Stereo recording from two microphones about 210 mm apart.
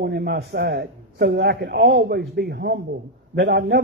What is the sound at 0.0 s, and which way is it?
A man's voice, 50° right (ahead or behind).